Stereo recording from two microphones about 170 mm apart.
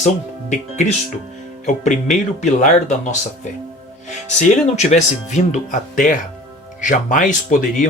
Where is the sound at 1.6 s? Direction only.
45° left (ahead or behind).